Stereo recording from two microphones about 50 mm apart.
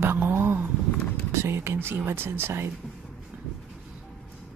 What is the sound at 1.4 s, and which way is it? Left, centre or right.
Speech, right.